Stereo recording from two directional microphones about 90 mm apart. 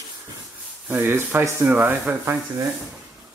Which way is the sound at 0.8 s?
25° right (ahead or behind).